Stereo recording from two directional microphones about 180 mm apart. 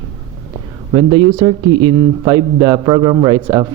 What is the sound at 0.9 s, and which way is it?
Speech, 25° right (ahead or behind).